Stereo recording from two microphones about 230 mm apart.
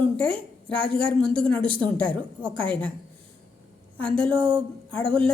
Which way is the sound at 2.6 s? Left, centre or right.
Centre.